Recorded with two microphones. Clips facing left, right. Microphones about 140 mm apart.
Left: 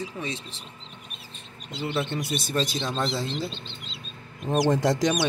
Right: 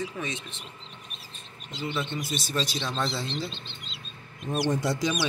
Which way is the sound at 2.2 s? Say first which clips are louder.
Left 3 dB; 55° left (ahead or behind).